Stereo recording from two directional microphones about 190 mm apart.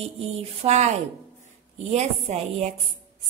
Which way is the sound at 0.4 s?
35° right (ahead or behind).